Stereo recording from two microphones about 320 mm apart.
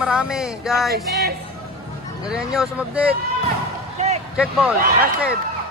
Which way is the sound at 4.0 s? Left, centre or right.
Centre.